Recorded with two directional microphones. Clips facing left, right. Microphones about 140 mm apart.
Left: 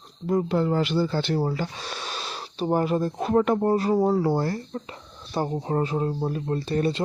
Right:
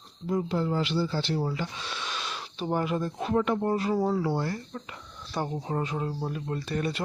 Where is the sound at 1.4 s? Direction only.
40° left (ahead or behind).